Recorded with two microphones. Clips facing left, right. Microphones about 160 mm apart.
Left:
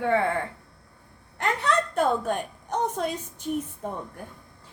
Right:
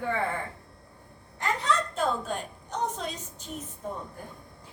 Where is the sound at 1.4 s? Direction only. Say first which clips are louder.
Left 3 dB; 60° left (ahead or behind).